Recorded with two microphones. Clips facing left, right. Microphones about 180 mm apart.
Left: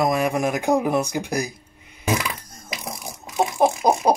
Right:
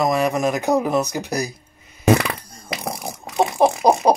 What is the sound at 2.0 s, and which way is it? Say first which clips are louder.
Fart: right 7 dB; 65° right (ahead or behind).